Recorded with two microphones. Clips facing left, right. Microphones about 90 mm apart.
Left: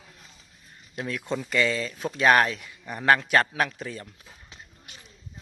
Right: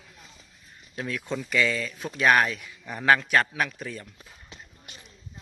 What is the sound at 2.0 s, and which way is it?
Speech, 35° left (ahead or behind).